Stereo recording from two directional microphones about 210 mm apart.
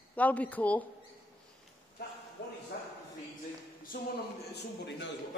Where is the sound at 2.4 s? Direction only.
55° left (ahead or behind).